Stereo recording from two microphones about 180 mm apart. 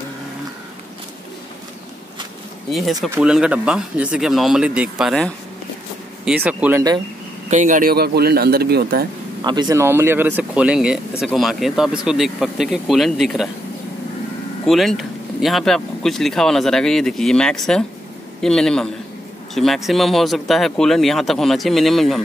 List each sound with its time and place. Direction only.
2.7 s speech: centre (ahead or behind)
7.4 s a man's voice: 45° right (ahead or behind); by 9.0 s 60° right (ahead or behind)
9.4 s speech: 25° right (ahead or behind); by 13.5 s centre (ahead or behind)
14.7 s speech: centre (ahead or behind)